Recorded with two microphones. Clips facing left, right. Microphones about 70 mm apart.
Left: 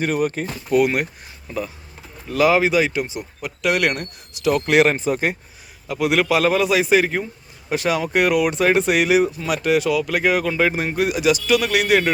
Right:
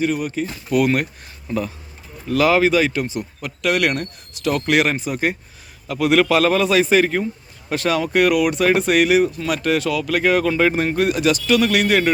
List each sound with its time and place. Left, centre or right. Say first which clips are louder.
0.0 s speech: even; left
0.7 s speech: even; centre
1.5 s speech: right 4 dB; centre
2.3 s speech: right 1 dB; centre
5.9 s speech: right 2 dB; centre